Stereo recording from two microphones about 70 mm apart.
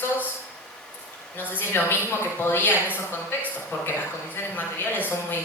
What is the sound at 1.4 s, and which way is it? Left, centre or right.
Speech, left.